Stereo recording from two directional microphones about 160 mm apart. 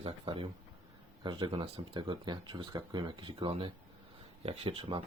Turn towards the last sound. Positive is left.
turn(degrees=-35)  # may be behind; listen again after turning